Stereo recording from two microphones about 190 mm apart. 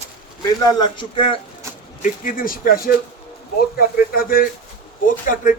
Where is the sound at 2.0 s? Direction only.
45° left (ahead or behind).